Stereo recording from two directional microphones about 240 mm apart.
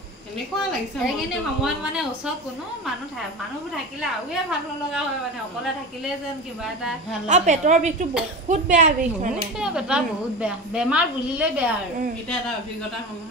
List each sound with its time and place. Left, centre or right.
0.7 s a woman's voice: centre
3.7 s a woman's voice: centre
6.6 s a woman's voice: centre
7.2 s a woman's voice: right
9.6 s a woman's voice: centre